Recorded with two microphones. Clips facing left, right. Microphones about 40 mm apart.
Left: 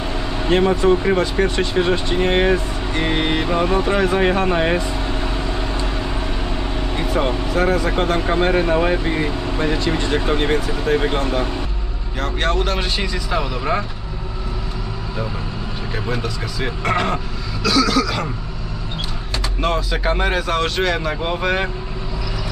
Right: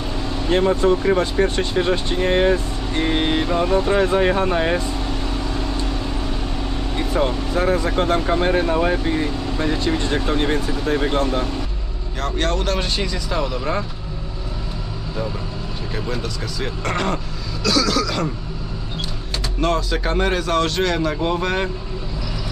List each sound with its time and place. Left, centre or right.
0.0 s vehicle: left
0.5 s music: left
1.2 s speech: left
2.3 s speech: left
2.9 s music: left
3.6 s music: left
3.9 s vehicle: left
7.5 s speech: left
10.8 s speech: left
12.2 s speech: centre
16.0 s speech: centre
19.6 s speech: centre